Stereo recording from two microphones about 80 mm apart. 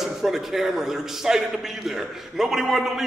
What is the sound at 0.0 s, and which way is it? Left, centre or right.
A man's voice, centre.